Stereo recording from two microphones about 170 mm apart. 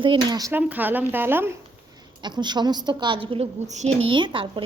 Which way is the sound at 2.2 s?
25° right (ahead or behind).